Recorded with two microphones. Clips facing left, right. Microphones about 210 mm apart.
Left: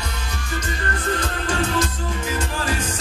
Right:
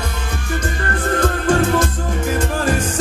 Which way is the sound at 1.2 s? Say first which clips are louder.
Right 8 dB; 55° right (ahead or behind).